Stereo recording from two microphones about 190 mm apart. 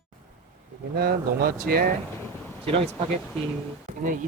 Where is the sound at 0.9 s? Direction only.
55° right (ahead or behind).